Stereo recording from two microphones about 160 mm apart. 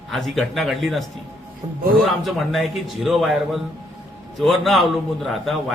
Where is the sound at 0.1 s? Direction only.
Centre (ahead or behind).